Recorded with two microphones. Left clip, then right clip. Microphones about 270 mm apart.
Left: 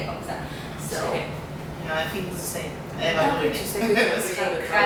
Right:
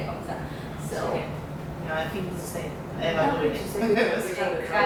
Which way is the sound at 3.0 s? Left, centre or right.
Centre.